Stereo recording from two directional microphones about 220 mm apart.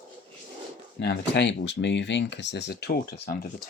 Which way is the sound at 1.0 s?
50° left (ahead or behind).